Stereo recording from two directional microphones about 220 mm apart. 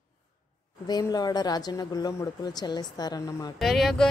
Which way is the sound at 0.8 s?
20° left (ahead or behind).